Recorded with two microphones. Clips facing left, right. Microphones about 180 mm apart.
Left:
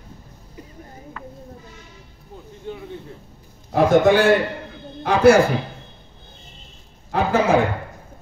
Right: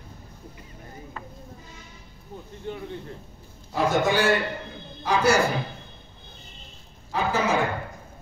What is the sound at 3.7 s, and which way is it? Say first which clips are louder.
Speech: left 8 dB; 55° left (ahead or behind).